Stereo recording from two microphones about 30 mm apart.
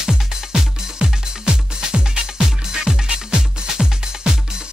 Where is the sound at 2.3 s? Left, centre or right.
Centre.